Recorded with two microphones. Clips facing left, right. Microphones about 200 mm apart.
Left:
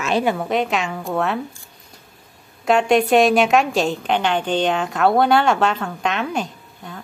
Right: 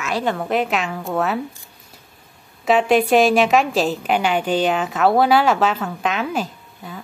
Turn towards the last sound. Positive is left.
turn(degrees=-5)  # may be behind; listen again after turning